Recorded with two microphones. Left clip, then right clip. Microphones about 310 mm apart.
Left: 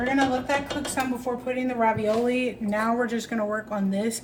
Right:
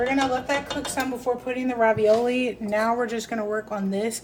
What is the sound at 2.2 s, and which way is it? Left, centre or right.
A woman's voice, right.